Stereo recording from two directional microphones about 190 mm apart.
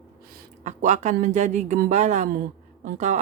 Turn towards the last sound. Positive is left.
turn(degrees=-40)  # may be behind; listen again after turning